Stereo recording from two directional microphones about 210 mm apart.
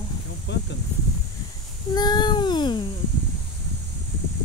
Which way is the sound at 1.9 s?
20° left (ahead or behind).